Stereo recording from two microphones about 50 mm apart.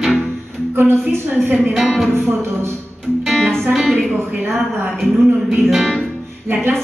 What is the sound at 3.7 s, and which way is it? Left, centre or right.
Speech, centre.